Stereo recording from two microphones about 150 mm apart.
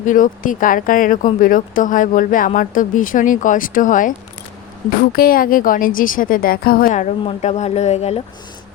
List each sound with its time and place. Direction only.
0.0 s speech: 60° left (ahead or behind)
5.1 s a woman's voice: 75° left (ahead or behind); by 7.1 s 60° left (ahead or behind)
7.3 s speech: 50° left (ahead or behind)